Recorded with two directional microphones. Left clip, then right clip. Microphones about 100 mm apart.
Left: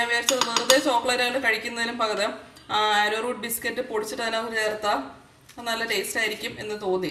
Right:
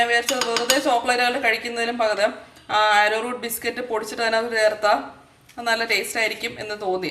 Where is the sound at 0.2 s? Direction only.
15° left (ahead or behind).